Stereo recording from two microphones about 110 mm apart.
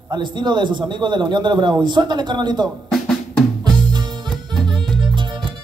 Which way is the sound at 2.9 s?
5° left (ahead or behind).